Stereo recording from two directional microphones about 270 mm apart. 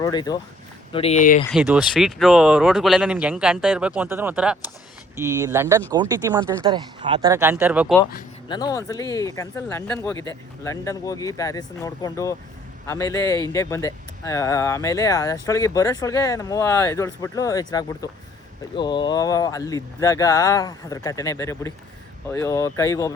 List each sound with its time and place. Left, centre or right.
0.0 s speech: centre
1.5 s speech: centre
8.4 s speech: centre